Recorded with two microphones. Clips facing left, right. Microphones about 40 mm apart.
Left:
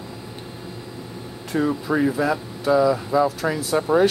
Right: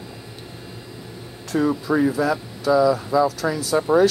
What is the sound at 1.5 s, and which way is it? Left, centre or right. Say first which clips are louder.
Speech: right 1 dB; centre.